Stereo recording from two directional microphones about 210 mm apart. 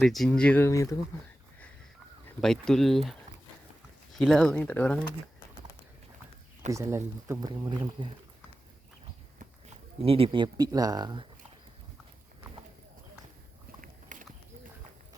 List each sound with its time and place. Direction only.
0.0 s speech: centre (ahead or behind)
2.4 s speech: centre (ahead or behind)
6.7 s speech: 15° right (ahead or behind)
10.0 s speech: 25° right (ahead or behind)
13.8 s a sound: 40° right (ahead or behind)